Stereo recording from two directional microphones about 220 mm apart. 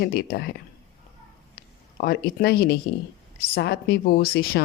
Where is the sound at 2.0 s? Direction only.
45° left (ahead or behind).